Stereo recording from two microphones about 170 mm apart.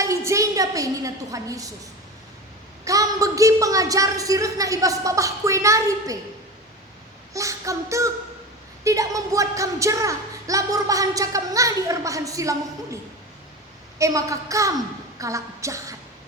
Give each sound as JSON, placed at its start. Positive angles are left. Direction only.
{"t": 0.0, "sound": "a woman's voice", "side_deg": -20}
{"t": 7.3, "sound": "a woman's voice", "side_deg": -20}
{"t": 14.0, "sound": "a woman's voice", "side_deg": -20}